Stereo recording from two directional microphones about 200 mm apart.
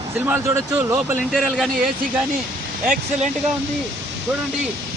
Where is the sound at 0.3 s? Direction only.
10° right (ahead or behind).